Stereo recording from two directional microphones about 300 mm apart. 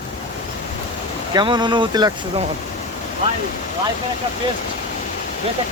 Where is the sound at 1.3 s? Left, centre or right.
Centre.